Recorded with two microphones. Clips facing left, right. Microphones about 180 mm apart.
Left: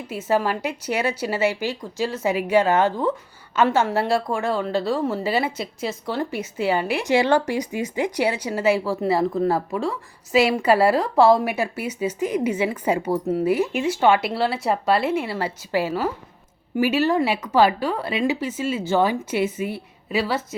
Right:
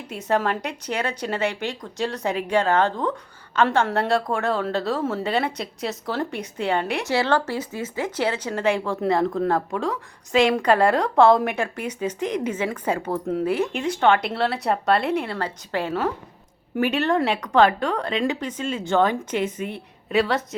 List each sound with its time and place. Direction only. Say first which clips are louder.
0.1 s a woman's voice: left 1 dB; 5° left (ahead or behind)
7.1 s a woman's voice: left 4 dB; 15° left (ahead or behind)